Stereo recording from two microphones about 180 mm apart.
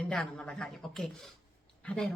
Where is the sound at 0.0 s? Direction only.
5° left (ahead or behind).